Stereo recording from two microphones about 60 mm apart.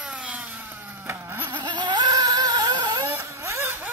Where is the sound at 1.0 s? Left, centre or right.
Right.